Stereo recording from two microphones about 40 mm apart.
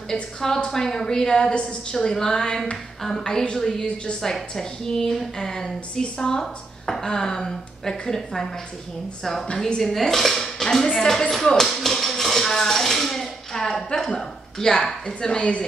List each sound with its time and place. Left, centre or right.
0.1 s a woman's voice: centre
2.0 s a woman's voice: centre
3.8 s a woman's voice: left
4.2 s a woman's voice: centre
11.7 s tap: centre
14.1 s a woman's voice: centre